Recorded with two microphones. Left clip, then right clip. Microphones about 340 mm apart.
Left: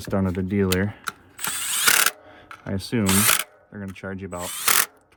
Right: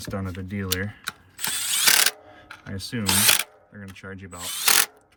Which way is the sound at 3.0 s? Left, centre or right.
Centre.